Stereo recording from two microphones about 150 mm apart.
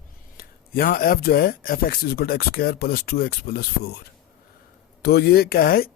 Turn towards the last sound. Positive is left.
turn(degrees=80)